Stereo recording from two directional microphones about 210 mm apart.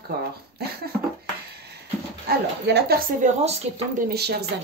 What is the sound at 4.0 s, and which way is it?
Speech, 50° right (ahead or behind).